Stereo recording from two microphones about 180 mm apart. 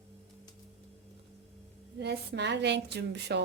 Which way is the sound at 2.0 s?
70° right (ahead or behind).